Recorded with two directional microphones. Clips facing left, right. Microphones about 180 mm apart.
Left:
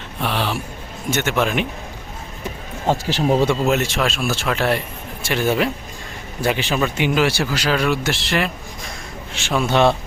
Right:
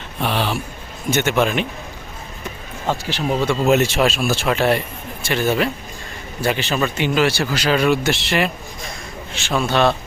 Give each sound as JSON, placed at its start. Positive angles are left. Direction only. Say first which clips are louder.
{"t": 0.2, "sound": "speech", "louder": "right 1 dB", "side_deg": 0}
{"t": 2.8, "sound": "speech", "louder": "left 3 dB", "side_deg": 40}
{"t": 3.6, "sound": "speech", "louder": "right 3 dB", "side_deg": -5}
{"t": 5.2, "sound": "speech", "louder": "even", "side_deg": 10}
{"t": 9.3, "sound": "speech", "louder": "even", "side_deg": 10}
{"t": 9.6, "sound": "a man's voice", "louder": "left 1 dB", "side_deg": 20}